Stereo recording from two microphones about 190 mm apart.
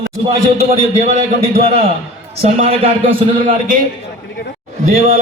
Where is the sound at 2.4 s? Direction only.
30° right (ahead or behind).